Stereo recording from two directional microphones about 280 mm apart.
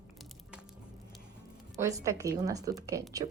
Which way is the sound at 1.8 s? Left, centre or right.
Centre.